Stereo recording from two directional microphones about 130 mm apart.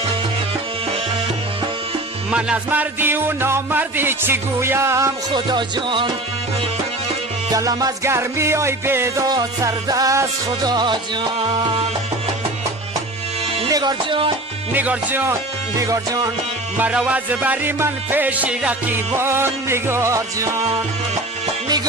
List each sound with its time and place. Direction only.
2.3 s music: 10° right (ahead or behind)
5.3 s music: 35° right (ahead or behind)
7.5 s music: 25° right (ahead or behind)
13.7 s music: 30° right (ahead or behind)
14.7 s music: 15° right (ahead or behind)
15.8 s music: 25° right (ahead or behind)
16.7 s music: 10° right (ahead or behind)